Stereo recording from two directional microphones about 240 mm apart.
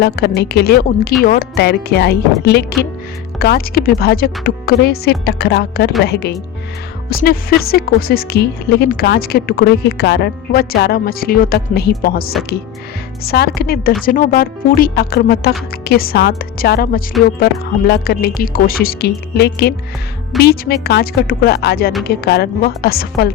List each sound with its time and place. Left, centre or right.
0.0 s a woman's voice: left